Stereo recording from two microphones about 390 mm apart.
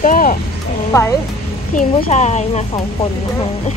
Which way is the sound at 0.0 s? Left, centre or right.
Left.